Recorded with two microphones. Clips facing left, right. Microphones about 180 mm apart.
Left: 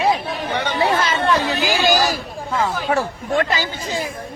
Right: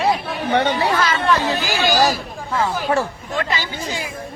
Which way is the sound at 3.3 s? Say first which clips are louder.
Left 4 dB; 45° left (ahead or behind).